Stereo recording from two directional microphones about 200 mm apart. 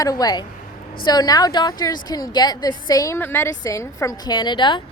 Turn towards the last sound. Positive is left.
turn(degrees=25)  # may be behind; listen again after turning